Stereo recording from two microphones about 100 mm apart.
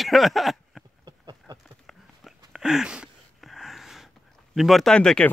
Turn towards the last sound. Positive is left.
turn(degrees=10)  # may be behind; listen again after turning